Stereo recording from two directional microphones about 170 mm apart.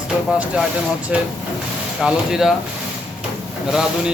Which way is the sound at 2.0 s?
5° right (ahead or behind).